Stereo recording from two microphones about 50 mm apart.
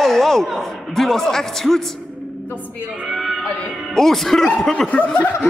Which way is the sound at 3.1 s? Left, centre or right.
Centre.